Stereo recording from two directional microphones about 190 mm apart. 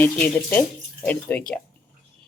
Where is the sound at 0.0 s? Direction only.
10° left (ahead or behind).